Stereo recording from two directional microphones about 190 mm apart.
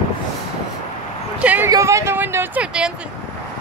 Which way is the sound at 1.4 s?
10° right (ahead or behind).